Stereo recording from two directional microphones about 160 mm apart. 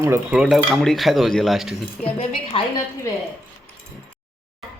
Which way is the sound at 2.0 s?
35° left (ahead or behind).